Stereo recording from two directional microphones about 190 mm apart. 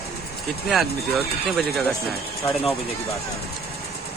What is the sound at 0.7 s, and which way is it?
Speech, centre (ahead or behind).